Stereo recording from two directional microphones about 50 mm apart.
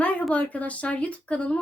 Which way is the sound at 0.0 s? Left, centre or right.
Left.